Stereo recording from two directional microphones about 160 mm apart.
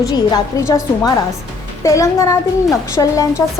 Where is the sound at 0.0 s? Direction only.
20° left (ahead or behind).